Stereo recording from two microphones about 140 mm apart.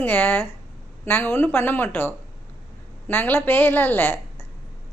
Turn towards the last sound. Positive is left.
turn(degrees=15)  # may be behind; listen again after turning